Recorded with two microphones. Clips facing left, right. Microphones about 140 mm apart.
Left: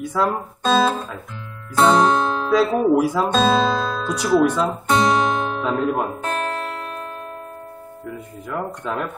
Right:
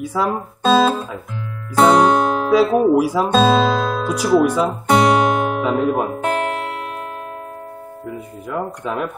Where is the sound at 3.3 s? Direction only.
25° right (ahead or behind).